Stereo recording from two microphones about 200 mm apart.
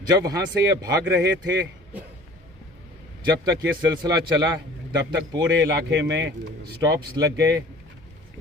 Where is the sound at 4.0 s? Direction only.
20° right (ahead or behind).